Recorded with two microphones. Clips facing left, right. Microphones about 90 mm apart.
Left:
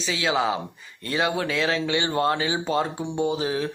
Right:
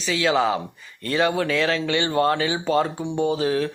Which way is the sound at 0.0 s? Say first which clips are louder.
Right 3 dB; 20° left (ahead or behind).